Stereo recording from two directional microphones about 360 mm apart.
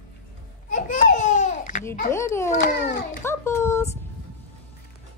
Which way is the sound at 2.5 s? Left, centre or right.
Left.